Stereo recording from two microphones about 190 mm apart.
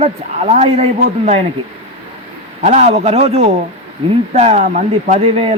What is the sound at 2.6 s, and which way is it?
A man's voice, 35° right (ahead or behind).